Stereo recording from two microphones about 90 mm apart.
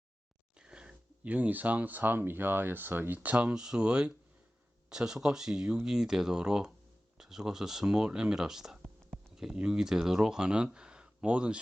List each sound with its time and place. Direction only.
0.6 s speech: 10° right (ahead or behind)